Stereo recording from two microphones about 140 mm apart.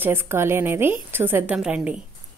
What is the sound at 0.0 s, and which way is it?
A woman's voice, 15° right (ahead or behind).